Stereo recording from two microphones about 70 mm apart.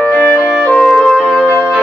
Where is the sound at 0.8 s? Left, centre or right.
Centre.